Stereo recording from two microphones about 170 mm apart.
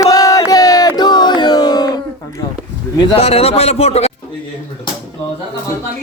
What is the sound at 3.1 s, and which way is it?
Speech, 35° left (ahead or behind).